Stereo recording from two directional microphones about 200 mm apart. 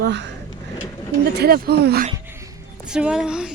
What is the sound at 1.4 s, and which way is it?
Speech, 55° right (ahead or behind).